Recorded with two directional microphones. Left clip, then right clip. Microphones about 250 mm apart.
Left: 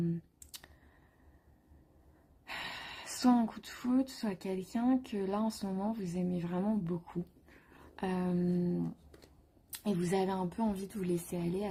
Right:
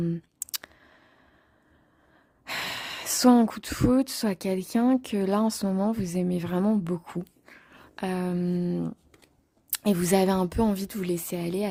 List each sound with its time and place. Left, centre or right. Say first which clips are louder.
0.0 s clicking: right 7 dB; right
2.4 s a woman's voice: right 10 dB; right